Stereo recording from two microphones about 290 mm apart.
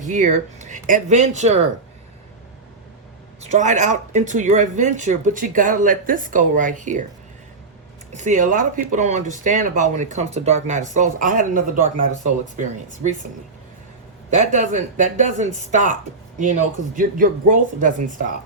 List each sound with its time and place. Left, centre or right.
0.0 s speech: right
3.4 s speech: right
8.1 s speech: right
14.4 s speech: right